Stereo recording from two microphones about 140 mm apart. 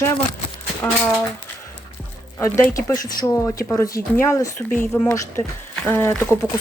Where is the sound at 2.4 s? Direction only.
20° left (ahead or behind).